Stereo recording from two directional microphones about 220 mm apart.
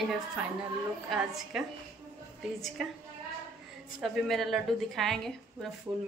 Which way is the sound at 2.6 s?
Centre (ahead or behind).